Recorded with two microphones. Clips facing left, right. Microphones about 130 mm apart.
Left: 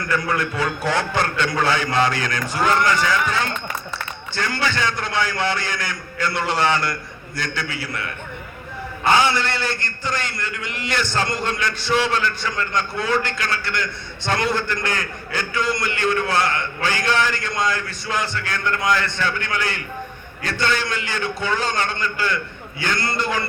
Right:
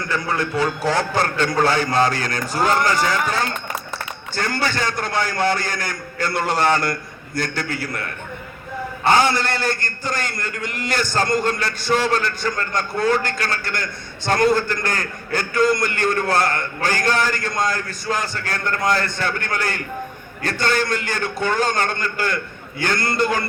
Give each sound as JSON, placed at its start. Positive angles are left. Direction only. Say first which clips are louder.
{"t": 0.1, "sound": "a man's voice", "louder": "even", "side_deg": -30}